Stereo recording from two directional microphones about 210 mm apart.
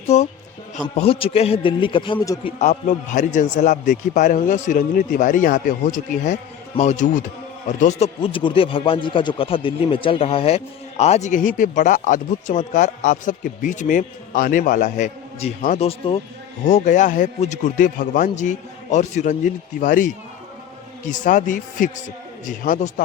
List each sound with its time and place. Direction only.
0.1 s a man's voice: 30° left (ahead or behind); by 2.5 s 15° left (ahead or behind)
2.6 s speech: 35° left (ahead or behind)